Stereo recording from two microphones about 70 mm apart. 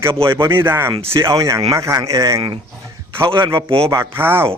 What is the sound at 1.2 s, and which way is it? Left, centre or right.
Speech, right.